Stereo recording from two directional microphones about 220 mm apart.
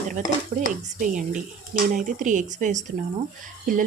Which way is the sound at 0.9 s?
35° right (ahead or behind).